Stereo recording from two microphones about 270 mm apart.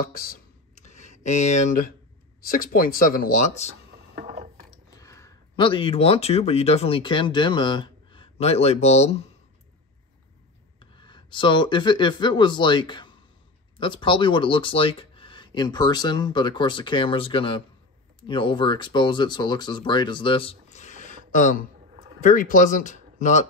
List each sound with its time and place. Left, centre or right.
0.0 s a sound: left
1.2 s speech: left
4.1 s gears: right
4.9 s speech: centre
10.8 s speech: centre